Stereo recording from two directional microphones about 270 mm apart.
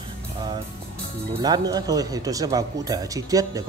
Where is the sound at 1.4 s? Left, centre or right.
Centre.